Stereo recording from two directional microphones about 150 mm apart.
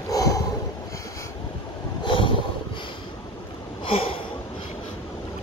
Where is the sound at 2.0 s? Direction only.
35° left (ahead or behind).